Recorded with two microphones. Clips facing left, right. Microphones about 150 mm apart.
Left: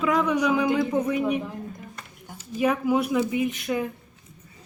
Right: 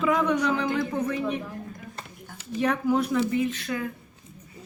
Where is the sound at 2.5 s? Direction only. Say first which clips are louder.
Left 1 dB; 10° left (ahead or behind).